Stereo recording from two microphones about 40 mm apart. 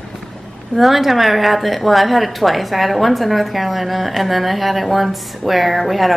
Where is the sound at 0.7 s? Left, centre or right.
Centre.